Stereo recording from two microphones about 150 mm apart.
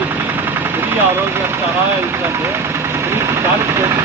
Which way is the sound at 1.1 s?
15° right (ahead or behind).